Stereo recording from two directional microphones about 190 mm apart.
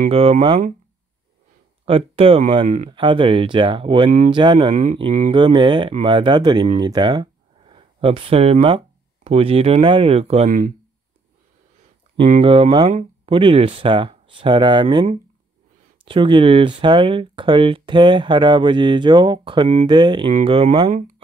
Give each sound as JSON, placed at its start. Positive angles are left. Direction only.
{"t": 0.1, "sound": "speech", "side_deg": -30}
{"t": 1.9, "sound": "speech", "side_deg": -30}
{"t": 2.9, "sound": "speech", "side_deg": -25}
{"t": 12.3, "sound": "speech", "side_deg": -30}